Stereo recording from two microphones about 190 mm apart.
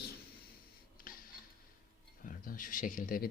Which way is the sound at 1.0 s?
50° left (ahead or behind).